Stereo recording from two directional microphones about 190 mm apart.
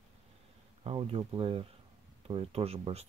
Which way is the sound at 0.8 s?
30° right (ahead or behind).